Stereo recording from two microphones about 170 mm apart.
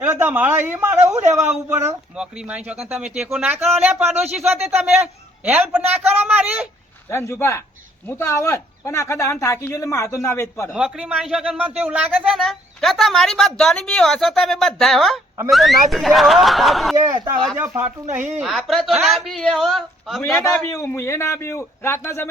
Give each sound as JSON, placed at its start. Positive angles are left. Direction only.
{"t": 0.0, "sound": "speech", "side_deg": -10}
{"t": 7.1, "sound": "speech", "side_deg": 15}
{"t": 10.8, "sound": "a woman's voice", "side_deg": -5}
{"t": 17.6, "sound": "speech", "side_deg": -15}
{"t": 18.3, "sound": "a woman's voice", "side_deg": 0}
{"t": 20.7, "sound": "speech", "side_deg": 15}